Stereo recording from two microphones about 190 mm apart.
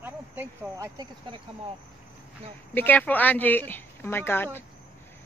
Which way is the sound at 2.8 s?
10° left (ahead or behind).